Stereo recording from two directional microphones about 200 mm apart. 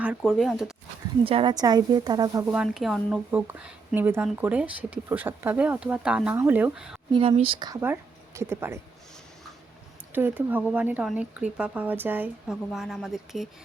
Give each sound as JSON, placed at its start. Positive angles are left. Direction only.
{"t": 0.0, "sound": "speech", "side_deg": -5}
{"t": 1.2, "sound": "speech", "side_deg": -25}
{"t": 7.1, "sound": "speech", "side_deg": -30}
{"t": 10.1, "sound": "speech", "side_deg": -10}